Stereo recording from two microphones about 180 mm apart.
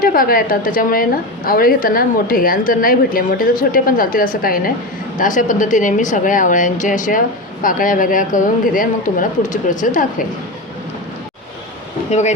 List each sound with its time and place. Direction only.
0.0 s a woman's voice: 50° left (ahead or behind)